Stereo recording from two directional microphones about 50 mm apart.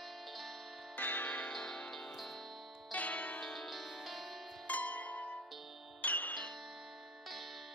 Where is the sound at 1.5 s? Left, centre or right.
Centre.